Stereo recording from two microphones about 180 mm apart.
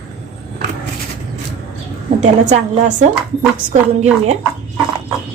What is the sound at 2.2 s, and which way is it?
A woman's voice, 40° right (ahead or behind).